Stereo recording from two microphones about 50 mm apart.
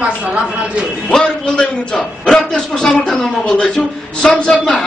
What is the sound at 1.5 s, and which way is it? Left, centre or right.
A man's voice, centre.